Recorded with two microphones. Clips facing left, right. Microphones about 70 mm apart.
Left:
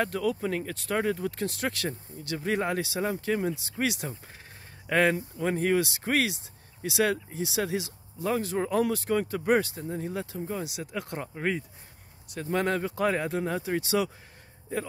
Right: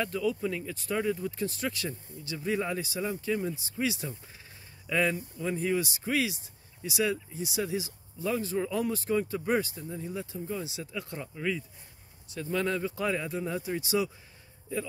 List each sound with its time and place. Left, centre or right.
0.0 s speech: left
2.2 s speech: left
3.0 s speech: left
8.3 s speech: left
13.3 s speech: left